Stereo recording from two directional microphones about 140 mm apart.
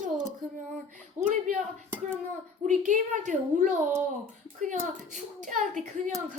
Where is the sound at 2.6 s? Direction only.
60° right (ahead or behind).